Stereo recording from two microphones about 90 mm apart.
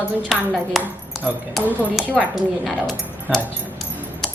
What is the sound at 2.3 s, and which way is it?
Speech, centre (ahead or behind).